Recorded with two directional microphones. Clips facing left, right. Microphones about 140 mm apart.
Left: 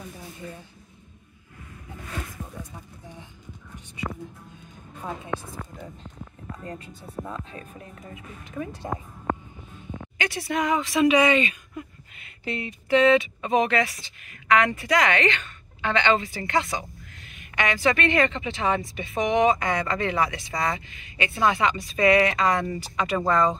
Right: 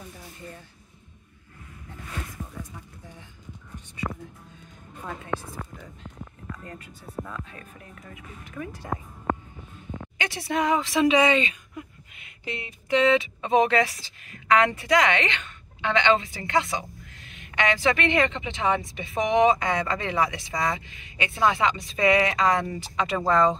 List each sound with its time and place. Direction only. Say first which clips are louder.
2.7 s a sound: left 2 dB; 20° left (ahead or behind)
6.5 s speech: left 5 dB; 25° left (ahead or behind)
10.1 s a sound: left 3 dB; 25° right (ahead or behind)
10.5 s a woman's voice: right 1 dB; 25° right (ahead or behind)
12.2 s speech: left 4 dB; 15° right (ahead or behind)
13.0 s a woman's voice: left 2 dB; 25° right (ahead or behind)